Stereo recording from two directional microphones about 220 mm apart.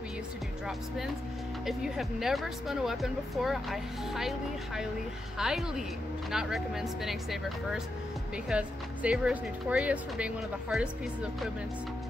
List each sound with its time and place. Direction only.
0.7 s speech: centre (ahead or behind)